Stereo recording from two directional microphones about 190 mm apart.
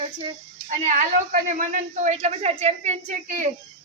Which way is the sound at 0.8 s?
40° right (ahead or behind).